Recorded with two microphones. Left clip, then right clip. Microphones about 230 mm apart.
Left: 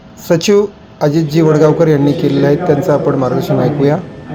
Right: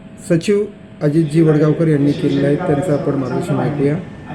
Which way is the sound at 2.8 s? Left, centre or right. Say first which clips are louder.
Left 6 dB; centre.